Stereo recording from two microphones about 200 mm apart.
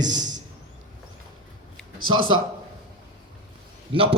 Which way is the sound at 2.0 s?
90° right.